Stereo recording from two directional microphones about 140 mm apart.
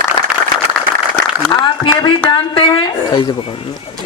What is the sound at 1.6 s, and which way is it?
A man's voice, 35° left (ahead or behind).